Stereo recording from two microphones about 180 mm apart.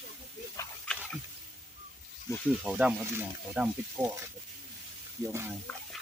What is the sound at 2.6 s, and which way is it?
Speech, 5° right (ahead or behind).